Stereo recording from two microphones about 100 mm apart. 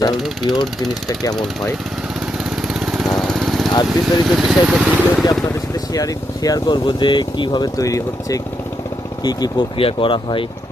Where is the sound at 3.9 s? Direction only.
5° right (ahead or behind).